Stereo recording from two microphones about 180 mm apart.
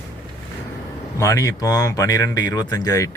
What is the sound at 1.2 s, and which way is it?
Speech, 15° left (ahead or behind).